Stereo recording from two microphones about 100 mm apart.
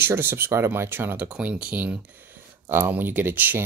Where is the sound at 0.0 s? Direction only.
20° right (ahead or behind).